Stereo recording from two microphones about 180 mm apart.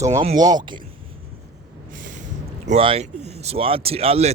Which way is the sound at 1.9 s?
45° right (ahead or behind).